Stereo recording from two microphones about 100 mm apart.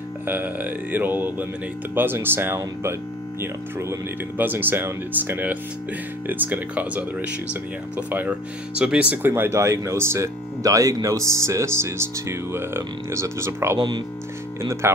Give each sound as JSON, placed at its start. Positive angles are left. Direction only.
{"t": 0.3, "sound": "speech", "side_deg": -20}
{"t": 9.1, "sound": "speech", "side_deg": -20}
{"t": 13.7, "sound": "speech", "side_deg": -50}
{"t": 14.6, "sound": "speech", "side_deg": -30}